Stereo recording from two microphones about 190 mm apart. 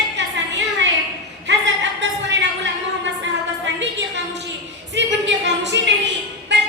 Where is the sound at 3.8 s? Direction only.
70° right (ahead or behind).